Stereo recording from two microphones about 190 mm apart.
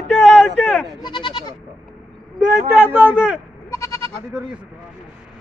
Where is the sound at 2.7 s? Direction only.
10° right (ahead or behind).